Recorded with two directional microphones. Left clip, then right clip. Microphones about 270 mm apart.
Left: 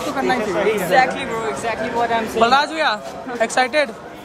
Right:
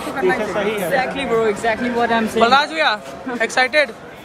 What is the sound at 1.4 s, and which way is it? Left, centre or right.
Speech, right.